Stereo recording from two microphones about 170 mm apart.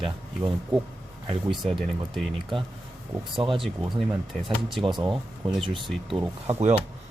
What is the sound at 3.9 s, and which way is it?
Speech, centre (ahead or behind).